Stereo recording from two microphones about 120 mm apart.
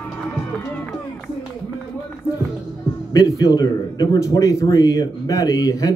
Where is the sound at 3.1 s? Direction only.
30° left (ahead or behind).